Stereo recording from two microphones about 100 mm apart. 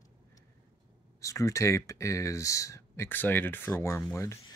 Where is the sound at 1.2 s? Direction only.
30° left (ahead or behind).